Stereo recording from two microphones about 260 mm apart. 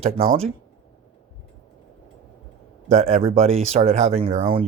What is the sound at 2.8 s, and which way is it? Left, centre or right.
Speech, right.